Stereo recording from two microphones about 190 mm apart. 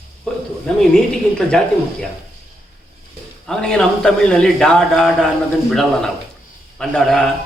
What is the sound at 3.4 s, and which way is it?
A man's voice, 5° left (ahead or behind).